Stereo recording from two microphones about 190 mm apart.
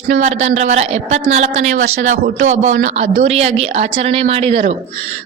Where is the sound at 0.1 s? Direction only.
40° right (ahead or behind).